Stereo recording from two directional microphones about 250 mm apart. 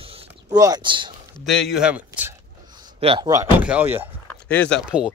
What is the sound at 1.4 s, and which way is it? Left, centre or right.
Speech, centre.